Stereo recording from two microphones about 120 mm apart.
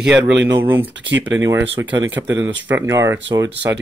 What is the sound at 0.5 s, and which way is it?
Speech, 15° right (ahead or behind).